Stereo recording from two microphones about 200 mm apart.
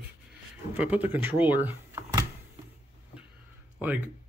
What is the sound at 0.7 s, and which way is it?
Speech, 10° right (ahead or behind).